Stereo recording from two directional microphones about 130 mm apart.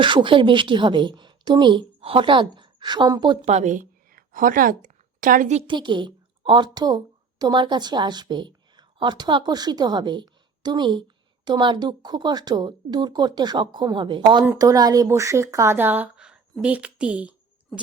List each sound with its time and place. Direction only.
0.0 s a woman's voice: 40° right (ahead or behind)
3.4 s a woman's voice: 60° right (ahead or behind); by 5.5 s 90° right
5.6 s a woman's voice: 35° right (ahead or behind); by 17.3 s 10° right (ahead or behind)
17.7 s a sound: 5° left (ahead or behind)